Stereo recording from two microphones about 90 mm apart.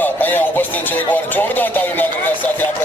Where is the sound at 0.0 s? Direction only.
20° left (ahead or behind).